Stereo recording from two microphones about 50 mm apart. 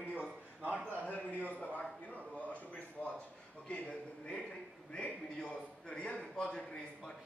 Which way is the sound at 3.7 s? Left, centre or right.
Centre.